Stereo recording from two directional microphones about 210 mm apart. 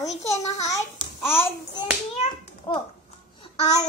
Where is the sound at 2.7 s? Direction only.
25° left (ahead or behind).